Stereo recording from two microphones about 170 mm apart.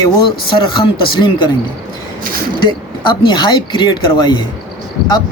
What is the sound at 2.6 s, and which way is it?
Speech, 25° left (ahead or behind).